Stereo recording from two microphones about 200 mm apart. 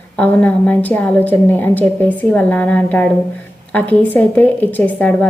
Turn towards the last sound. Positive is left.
turn(degrees=10)  # may be behind; listen again after turning